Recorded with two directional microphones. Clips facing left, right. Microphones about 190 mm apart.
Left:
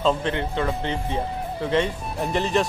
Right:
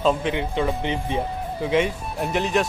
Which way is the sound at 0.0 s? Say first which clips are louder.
Right 1 dB; 10° right (ahead or behind).